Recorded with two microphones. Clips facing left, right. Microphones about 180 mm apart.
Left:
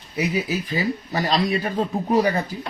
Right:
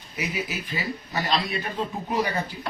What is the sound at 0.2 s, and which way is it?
Speech, 35° left (ahead or behind).